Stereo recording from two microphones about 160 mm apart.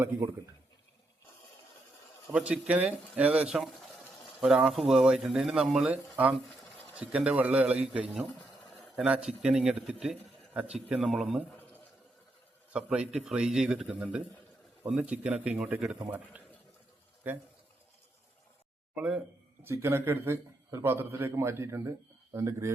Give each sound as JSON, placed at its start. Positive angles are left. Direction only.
{"t": 2.3, "sound": "a man's voice", "side_deg": -10}
{"t": 4.2, "sound": "a sound", "side_deg": -5}
{"t": 4.9, "sound": "a man's voice", "side_deg": -5}
{"t": 12.7, "sound": "a man's voice", "side_deg": -5}
{"t": 18.9, "sound": "a man's voice", "side_deg": -5}